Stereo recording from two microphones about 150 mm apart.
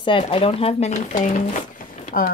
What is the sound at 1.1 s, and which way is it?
Speech, 55° left (ahead or behind).